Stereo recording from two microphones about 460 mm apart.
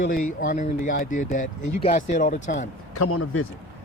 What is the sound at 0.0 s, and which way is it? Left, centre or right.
Speech, centre.